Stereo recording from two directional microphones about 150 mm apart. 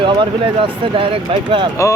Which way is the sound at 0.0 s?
35° right (ahead or behind).